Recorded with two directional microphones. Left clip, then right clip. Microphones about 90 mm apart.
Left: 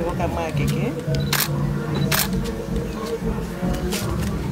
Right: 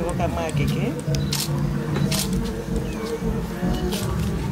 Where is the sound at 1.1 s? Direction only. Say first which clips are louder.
Left 4 dB; 35° left (ahead or behind).